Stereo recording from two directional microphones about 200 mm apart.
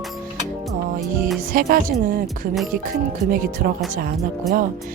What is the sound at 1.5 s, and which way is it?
Speech, 45° right (ahead or behind).